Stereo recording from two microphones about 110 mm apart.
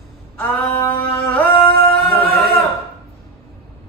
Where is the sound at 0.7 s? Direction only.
20° left (ahead or behind).